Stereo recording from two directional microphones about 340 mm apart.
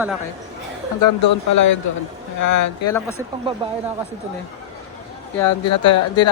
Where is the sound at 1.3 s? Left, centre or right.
Left.